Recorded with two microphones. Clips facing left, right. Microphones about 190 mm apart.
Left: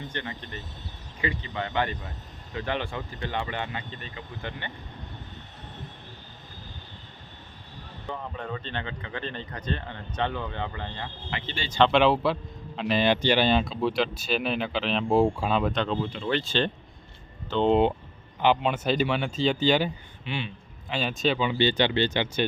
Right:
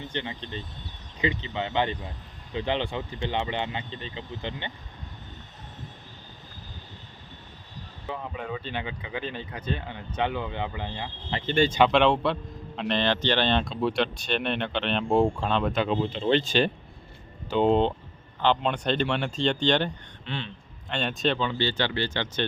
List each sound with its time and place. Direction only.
0.0 s speech: 15° right (ahead or behind)
8.0 s speech: 5° right (ahead or behind)
11.4 s speech: 55° right (ahead or behind)
11.9 s a man's voice: centre (ahead or behind)
15.9 s speech: 25° right (ahead or behind)
18.3 s a man's voice: 10° left (ahead or behind)